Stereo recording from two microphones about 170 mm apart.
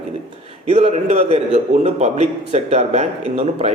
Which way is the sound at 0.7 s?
40° right (ahead or behind).